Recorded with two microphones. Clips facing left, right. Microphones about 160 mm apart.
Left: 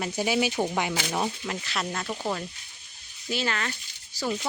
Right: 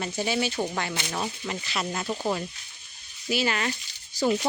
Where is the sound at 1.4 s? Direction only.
Centre (ahead or behind).